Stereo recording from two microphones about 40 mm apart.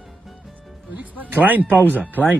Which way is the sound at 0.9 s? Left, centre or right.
Right.